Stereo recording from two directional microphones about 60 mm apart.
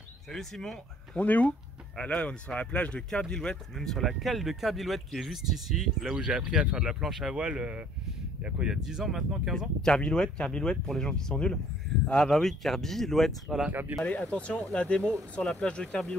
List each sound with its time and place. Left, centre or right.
0.3 s speech: centre
1.1 s speech: left
3.1 s speech: centre
6.1 s speech: centre
7.3 s speech: centre
8.6 s speech: centre
9.8 s speech: centre
13.7 s speech: right
14.0 s speech: left